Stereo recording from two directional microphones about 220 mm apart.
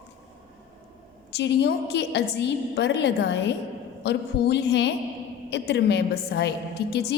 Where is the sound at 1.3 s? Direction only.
50° left (ahead or behind).